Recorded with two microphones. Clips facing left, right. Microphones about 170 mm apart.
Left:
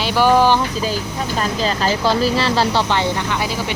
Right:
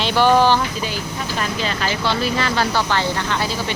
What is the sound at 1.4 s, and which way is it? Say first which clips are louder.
Speech: left 4 dB; 35° left (ahead or behind).